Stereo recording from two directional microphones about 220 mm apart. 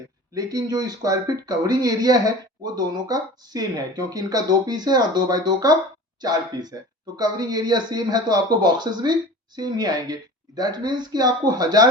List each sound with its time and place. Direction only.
0.3 s speech: 15° right (ahead or behind)